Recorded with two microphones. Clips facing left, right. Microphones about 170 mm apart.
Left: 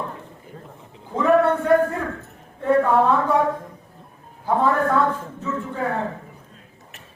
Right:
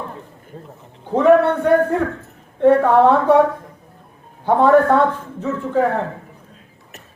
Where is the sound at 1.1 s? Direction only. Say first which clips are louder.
Right 5 dB; 70° right (ahead or behind).